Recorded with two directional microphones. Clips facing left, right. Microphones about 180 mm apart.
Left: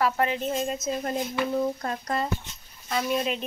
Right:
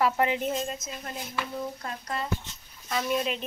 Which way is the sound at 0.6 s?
25° left (ahead or behind).